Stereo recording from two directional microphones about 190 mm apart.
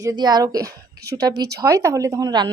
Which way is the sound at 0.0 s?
20° right (ahead or behind).